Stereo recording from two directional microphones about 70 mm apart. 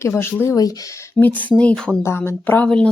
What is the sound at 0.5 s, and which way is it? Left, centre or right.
Speech, left.